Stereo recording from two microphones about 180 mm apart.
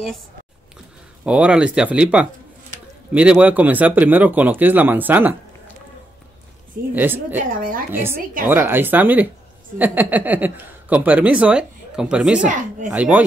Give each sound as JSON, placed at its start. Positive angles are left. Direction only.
{"t": 1.2, "sound": "speech", "side_deg": -5}
{"t": 7.0, "sound": "speech", "side_deg": -10}
{"t": 7.4, "sound": "a woman's voice", "side_deg": -50}
{"t": 7.9, "sound": "speech", "side_deg": -10}